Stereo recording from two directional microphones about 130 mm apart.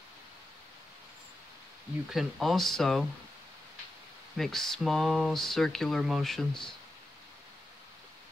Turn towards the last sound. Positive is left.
turn(degrees=5)  # may be behind; listen again after turning